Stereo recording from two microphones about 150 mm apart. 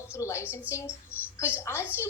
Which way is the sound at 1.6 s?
15° left (ahead or behind).